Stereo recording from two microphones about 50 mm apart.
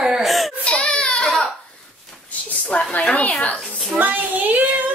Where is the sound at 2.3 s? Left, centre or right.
Left.